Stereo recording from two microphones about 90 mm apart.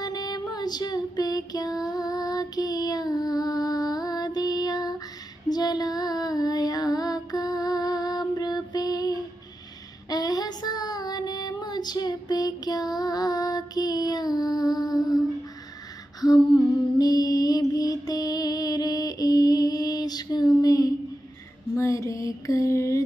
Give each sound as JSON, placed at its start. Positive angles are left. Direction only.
{"t": 0.0, "sound": "female singing", "side_deg": 45}
{"t": 1.9, "sound": "child singing", "side_deg": 45}
{"t": 5.5, "sound": "female singing", "side_deg": 50}
{"t": 10.0, "sound": "child singing", "side_deg": 45}
{"t": 16.3, "sound": "humming", "side_deg": 5}
{"t": 17.0, "sound": "mantra", "side_deg": 45}
{"t": 21.7, "sound": "mantra", "side_deg": 35}